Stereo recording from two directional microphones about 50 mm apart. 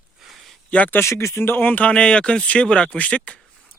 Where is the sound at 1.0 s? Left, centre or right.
Left.